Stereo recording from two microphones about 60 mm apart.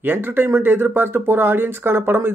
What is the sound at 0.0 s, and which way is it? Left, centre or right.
Speech, right.